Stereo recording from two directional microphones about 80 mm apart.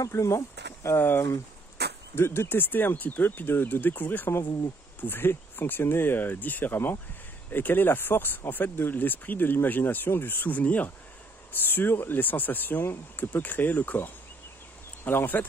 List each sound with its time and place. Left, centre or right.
0.0 s speech: left
0.9 s speech: left